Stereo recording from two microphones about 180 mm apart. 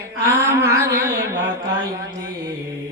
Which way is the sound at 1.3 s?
20° right (ahead or behind).